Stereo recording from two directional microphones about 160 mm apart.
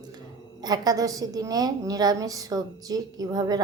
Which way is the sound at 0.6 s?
25° right (ahead or behind).